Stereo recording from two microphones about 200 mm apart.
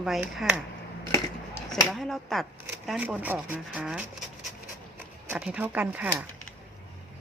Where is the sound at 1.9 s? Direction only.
Centre (ahead or behind).